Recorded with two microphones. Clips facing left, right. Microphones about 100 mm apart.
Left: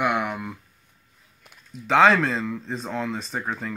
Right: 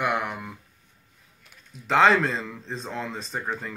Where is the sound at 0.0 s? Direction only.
Centre (ahead or behind).